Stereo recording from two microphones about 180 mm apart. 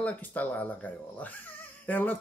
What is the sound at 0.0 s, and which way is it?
Speech, 10° left (ahead or behind).